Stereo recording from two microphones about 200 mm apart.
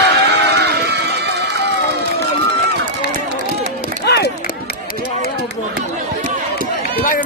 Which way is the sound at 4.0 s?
55° left (ahead or behind).